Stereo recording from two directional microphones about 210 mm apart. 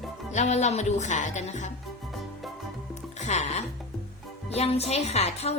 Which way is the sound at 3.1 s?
35° left (ahead or behind).